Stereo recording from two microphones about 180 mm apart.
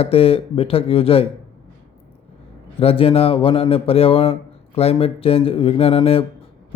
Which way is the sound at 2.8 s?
30° left (ahead or behind).